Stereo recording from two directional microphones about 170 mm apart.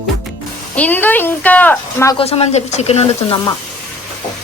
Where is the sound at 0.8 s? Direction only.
10° left (ahead or behind).